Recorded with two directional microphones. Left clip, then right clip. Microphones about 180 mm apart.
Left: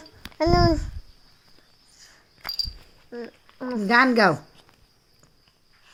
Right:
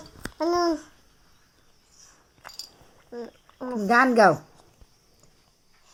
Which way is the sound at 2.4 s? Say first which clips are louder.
Left 12 dB; 55° left (ahead or behind).